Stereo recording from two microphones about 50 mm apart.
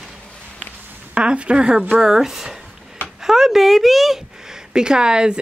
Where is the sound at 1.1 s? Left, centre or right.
Right; by 4.2 s centre.